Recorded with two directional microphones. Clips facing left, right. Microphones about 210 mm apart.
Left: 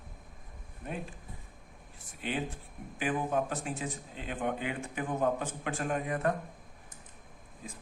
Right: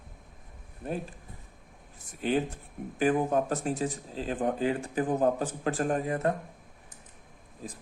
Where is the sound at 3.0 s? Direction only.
40° right (ahead or behind).